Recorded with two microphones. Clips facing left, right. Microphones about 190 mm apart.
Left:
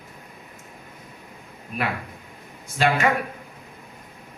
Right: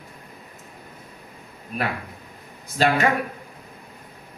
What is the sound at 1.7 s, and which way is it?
Speech, 35° right (ahead or behind).